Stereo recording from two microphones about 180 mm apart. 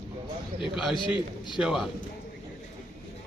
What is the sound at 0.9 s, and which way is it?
Speech, 25° left (ahead or behind).